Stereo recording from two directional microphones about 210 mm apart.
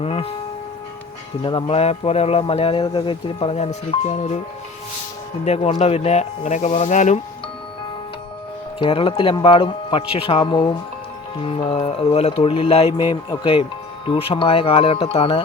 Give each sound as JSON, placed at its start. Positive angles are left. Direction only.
{"t": 0.0, "sound": "music", "side_deg": 30}
{"t": 1.4, "sound": "speech", "side_deg": 25}
{"t": 5.5, "sound": "speech", "side_deg": 30}
{"t": 8.8, "sound": "speech", "side_deg": 25}